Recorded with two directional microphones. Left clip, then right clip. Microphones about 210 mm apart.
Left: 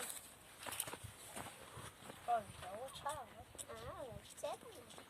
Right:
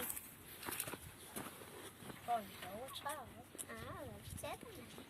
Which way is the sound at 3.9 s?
10° left (ahead or behind).